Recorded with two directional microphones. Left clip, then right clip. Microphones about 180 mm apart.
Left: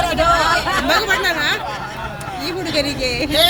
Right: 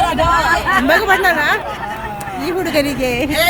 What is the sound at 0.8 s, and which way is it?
A woman's voice, 30° right (ahead or behind).